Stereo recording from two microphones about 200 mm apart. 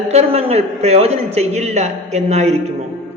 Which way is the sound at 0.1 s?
30° right (ahead or behind).